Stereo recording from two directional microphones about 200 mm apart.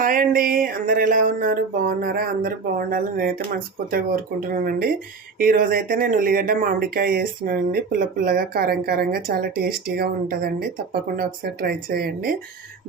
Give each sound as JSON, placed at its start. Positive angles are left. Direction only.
{"t": 0.0, "sound": "speech", "side_deg": -45}